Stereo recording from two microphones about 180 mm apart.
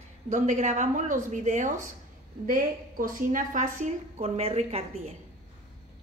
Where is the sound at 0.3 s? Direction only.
40° right (ahead or behind).